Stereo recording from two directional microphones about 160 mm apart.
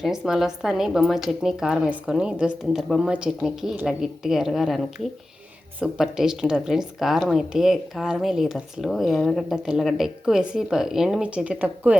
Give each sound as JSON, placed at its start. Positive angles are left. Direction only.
{"t": 0.0, "sound": "speech", "side_deg": -5}